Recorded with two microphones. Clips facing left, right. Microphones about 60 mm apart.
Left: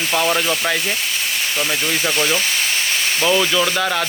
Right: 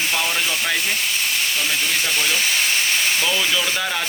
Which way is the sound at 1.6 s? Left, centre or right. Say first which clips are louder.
Left 2 dB; left.